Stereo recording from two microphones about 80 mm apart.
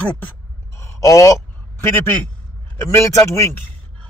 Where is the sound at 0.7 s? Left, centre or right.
Left.